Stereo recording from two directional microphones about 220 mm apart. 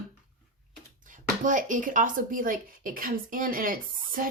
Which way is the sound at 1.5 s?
35° right (ahead or behind).